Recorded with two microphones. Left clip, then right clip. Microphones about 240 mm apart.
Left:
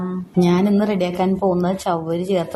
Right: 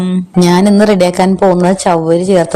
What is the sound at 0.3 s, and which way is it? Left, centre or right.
A woman's voice, right.